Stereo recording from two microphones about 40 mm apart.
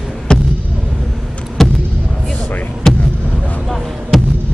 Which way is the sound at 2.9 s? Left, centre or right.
Centre.